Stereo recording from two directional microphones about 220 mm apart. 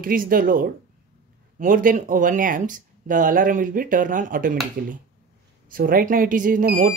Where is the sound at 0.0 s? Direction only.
40° right (ahead or behind).